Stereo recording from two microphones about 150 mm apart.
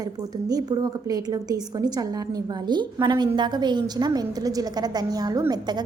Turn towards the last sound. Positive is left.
turn(degrees=-25)  # may be behind; listen again after turning